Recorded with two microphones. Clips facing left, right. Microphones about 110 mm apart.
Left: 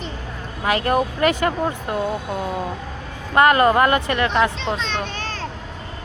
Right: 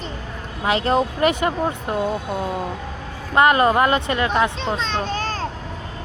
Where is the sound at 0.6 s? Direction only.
20° right (ahead or behind).